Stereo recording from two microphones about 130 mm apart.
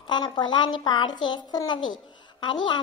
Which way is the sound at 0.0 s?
35° left (ahead or behind).